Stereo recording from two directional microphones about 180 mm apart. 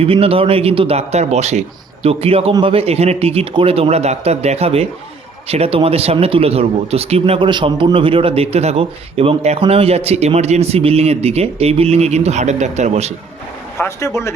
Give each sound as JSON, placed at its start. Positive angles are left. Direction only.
{"t": 0.0, "sound": "speech", "side_deg": -30}
{"t": 13.7, "sound": "speech", "side_deg": 15}